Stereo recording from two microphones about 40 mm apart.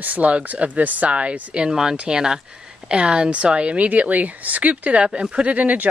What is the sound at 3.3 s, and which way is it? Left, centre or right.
Speech, right.